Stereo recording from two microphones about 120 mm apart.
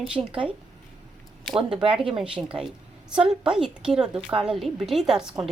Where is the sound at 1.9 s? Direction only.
5° right (ahead or behind).